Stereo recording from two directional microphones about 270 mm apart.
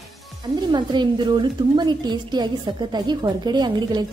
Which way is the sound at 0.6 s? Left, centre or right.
Centre.